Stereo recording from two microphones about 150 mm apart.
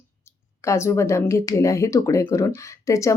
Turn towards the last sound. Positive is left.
turn(degrees=20)  # may be behind; listen again after turning